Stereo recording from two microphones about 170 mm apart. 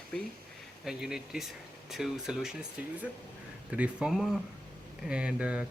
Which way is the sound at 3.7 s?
5° right (ahead or behind).